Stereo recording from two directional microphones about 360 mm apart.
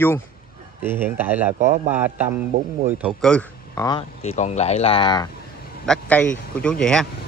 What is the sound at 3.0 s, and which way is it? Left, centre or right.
A man's voice, centre.